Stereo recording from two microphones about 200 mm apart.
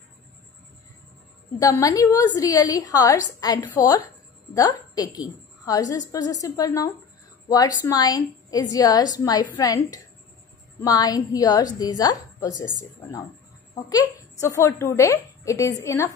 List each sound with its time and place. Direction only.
1.6 s a woman's voice: 15° left (ahead or behind)
13.7 s a woman's voice: 15° left (ahead or behind)